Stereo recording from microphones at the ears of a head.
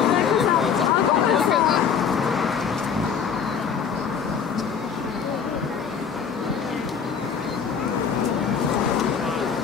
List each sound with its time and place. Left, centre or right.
0.0 s vehicle: left
8.2 s vehicle: left